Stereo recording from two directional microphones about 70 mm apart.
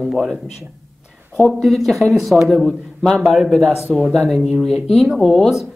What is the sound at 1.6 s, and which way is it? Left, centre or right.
Speech, centre.